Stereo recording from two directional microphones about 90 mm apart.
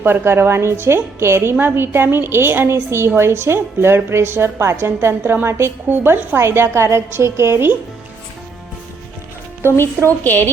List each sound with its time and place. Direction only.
0.0 s a woman's voice: 25° right (ahead or behind)
9.6 s a woman's voice: 25° left (ahead or behind)